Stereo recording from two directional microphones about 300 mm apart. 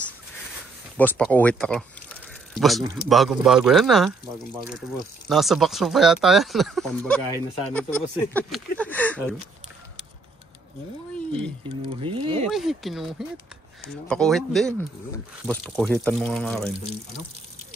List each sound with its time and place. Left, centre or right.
0.9 s speech: centre
11.1 s speech: centre
12.1 s speech: centre
12.4 s speech: centre